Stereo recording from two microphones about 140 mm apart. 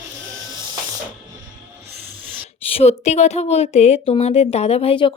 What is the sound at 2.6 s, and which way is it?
Speech, 45° left (ahead or behind).